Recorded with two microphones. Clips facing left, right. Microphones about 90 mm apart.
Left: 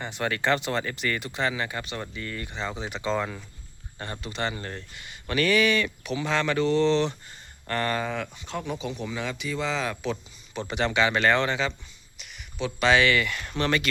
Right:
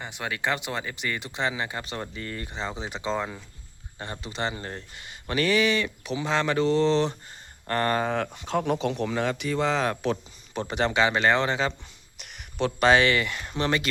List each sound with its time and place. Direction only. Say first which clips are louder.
0.0 s speech: left 3 dB; 10° right (ahead or behind); by 11.7 s 30° right (ahead or behind)
12.2 s a sound: right 4 dB; 60° right (ahead or behind)
12.9 s speech: left 1 dB; 30° right (ahead or behind)